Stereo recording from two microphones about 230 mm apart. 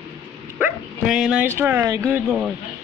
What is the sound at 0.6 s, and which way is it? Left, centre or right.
Dog, centre.